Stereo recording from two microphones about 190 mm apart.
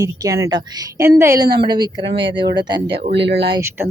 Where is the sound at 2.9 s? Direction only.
65° right (ahead or behind).